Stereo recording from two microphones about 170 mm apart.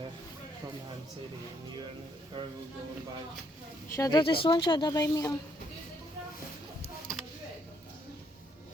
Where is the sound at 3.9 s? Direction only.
20° left (ahead or behind).